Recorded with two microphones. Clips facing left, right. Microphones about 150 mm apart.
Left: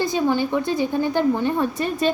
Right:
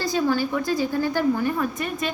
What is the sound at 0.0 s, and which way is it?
A woman's voice, 20° left (ahead or behind).